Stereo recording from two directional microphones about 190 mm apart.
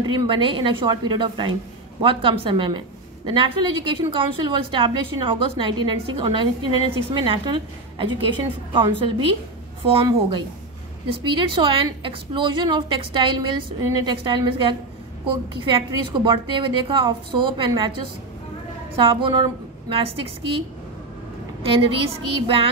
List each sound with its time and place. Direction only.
0.0 s a woman's voice: 25° right (ahead or behind)
11.1 s a woman's voice: 25° right (ahead or behind)
18.9 s a woman's voice: 25° right (ahead or behind)
21.6 s a woman's voice: 30° right (ahead or behind)